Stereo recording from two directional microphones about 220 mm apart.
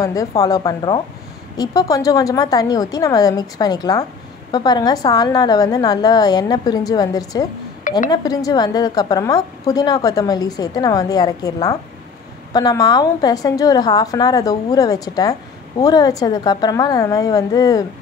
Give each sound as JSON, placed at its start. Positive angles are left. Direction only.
{"t": 0.0, "sound": "a woman's voice", "side_deg": 15}